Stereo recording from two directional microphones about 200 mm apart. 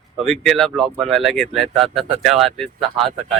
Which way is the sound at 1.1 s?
Centre (ahead or behind).